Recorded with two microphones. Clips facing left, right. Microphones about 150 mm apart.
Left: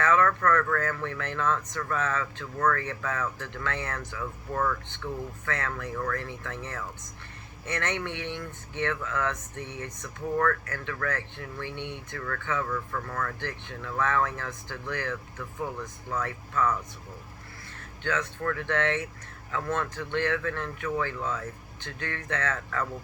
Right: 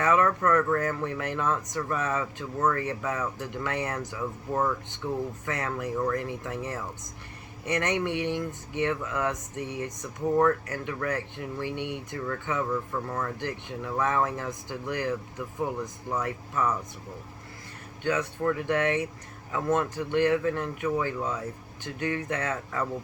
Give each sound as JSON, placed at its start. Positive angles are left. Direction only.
{"t": 0.0, "sound": "speech", "side_deg": -20}
{"t": 18.0, "sound": "speech", "side_deg": -15}